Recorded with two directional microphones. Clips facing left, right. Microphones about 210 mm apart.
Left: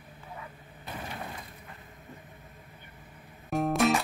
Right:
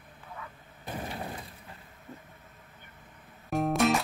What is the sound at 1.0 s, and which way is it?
Wood, 30° right (ahead or behind).